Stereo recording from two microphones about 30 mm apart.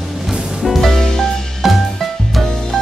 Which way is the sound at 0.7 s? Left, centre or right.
Centre.